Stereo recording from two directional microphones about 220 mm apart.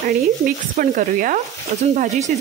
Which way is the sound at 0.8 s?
35° right (ahead or behind).